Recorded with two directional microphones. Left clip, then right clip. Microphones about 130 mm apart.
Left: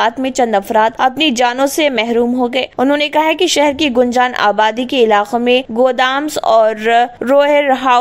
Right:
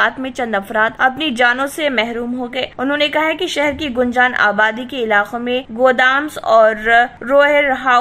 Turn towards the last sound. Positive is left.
turn(degrees=45)  # may be behind; listen again after turning